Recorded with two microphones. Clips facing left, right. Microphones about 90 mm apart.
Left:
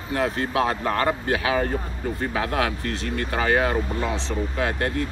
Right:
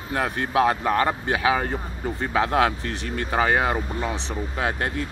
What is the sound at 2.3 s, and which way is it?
Speech, 25° right (ahead or behind).